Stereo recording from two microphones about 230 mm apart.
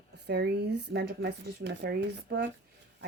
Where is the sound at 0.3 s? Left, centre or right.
Right.